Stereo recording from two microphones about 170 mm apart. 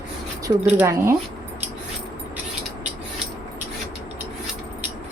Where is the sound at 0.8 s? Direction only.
15° right (ahead or behind).